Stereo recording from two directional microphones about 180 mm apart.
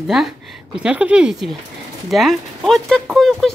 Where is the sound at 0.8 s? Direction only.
5° right (ahead or behind).